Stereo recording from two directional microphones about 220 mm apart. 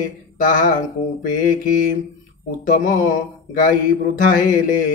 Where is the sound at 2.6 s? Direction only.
35° left (ahead or behind).